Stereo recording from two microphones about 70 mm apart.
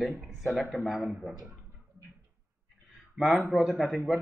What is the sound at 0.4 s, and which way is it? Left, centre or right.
Speech, centre.